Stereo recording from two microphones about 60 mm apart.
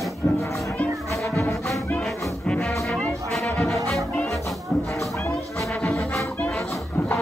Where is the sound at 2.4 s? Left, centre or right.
Centre.